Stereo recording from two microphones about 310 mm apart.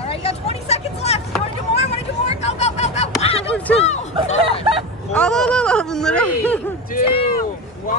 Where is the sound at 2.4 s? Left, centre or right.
Left.